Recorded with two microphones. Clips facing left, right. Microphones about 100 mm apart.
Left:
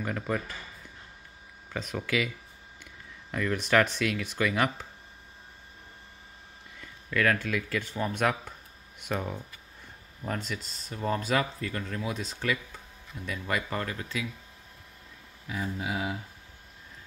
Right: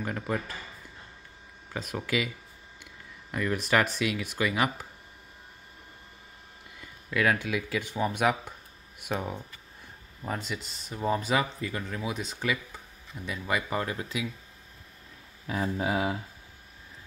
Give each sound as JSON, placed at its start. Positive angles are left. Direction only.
{"t": 0.0, "sound": "speech", "side_deg": -5}
{"t": 1.7, "sound": "speech", "side_deg": -5}
{"t": 6.8, "sound": "speech", "side_deg": -10}
{"t": 15.4, "sound": "speech", "side_deg": -45}